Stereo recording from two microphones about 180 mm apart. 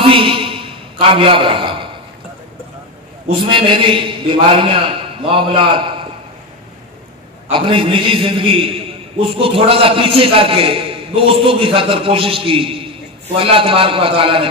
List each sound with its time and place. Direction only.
0.1 s a sound: 30° right (ahead or behind)
3.3 s a man's voice: 30° right (ahead or behind)
7.4 s a man's voice: 30° right (ahead or behind)